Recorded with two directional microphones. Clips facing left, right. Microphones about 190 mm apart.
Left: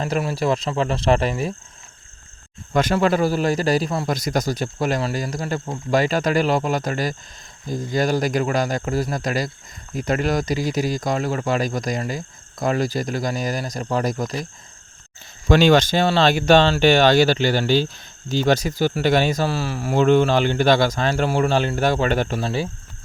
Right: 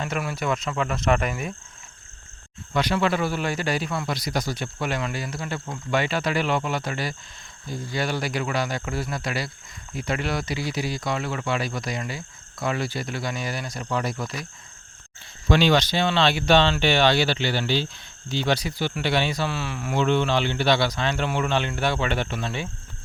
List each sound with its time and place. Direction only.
0.0 s speech: 30° left (ahead or behind)
2.7 s speech: 45° left (ahead or behind)
15.4 s speech: 45° left (ahead or behind)